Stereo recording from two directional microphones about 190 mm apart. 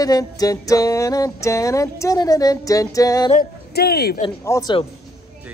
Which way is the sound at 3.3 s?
55° left (ahead or behind).